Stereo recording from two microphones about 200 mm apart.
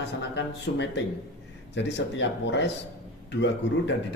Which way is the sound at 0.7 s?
55° left (ahead or behind).